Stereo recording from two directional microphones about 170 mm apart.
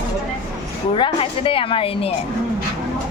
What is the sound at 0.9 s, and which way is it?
A woman's voice, 30° left (ahead or behind).